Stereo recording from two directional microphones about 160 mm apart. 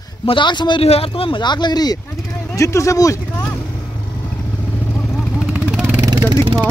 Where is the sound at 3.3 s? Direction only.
15° left (ahead or behind).